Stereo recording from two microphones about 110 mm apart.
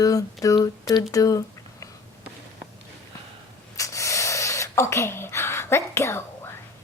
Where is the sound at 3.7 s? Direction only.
30° left (ahead or behind).